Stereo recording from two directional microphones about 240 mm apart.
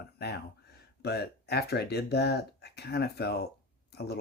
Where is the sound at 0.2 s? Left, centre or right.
Left.